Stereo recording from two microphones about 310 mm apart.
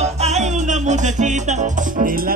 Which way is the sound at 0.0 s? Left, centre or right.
Right.